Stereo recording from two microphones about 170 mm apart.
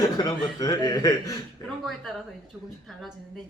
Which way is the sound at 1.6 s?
20° left (ahead or behind).